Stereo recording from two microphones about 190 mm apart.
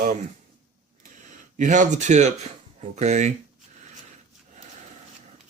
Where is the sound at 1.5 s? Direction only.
40° right (ahead or behind).